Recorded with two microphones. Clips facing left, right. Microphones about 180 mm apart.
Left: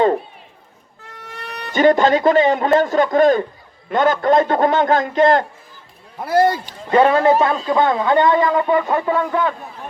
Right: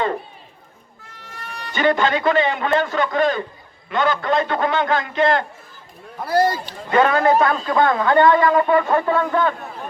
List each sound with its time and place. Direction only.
1.0 s music: 70° left (ahead or behind)
1.7 s a man's voice: 45° left (ahead or behind)
6.9 s a man's voice: 30° left (ahead or behind); by 9.5 s 10° left (ahead or behind)